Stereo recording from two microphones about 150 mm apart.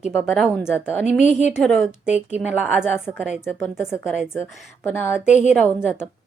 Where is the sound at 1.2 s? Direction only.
50° left (ahead or behind).